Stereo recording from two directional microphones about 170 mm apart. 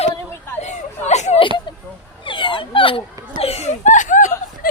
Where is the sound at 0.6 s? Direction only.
40° left (ahead or behind).